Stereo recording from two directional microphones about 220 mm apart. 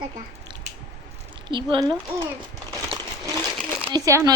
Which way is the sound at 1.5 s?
20° right (ahead or behind).